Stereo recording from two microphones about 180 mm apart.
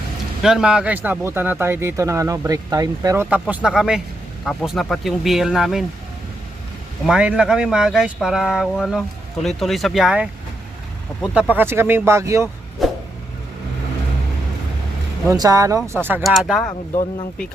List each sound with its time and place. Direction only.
0.4 s speech: 5° right (ahead or behind)
7.1 s speech: 5° right (ahead or behind)
12.8 s vehicle: centre (ahead or behind)
15.3 s speech: 20° right (ahead or behind)
16.2 s speech: centre (ahead or behind)